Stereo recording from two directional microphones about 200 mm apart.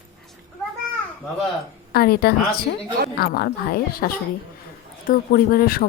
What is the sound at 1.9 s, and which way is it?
Speech, 50° left (ahead or behind).